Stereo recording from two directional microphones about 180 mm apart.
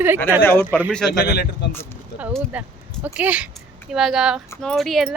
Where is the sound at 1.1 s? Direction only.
65° left (ahead or behind).